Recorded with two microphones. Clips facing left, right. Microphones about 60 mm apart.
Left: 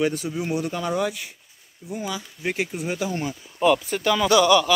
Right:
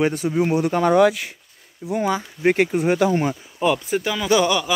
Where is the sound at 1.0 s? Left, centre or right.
Right.